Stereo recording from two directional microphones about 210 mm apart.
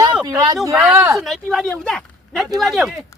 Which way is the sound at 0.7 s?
5° right (ahead or behind).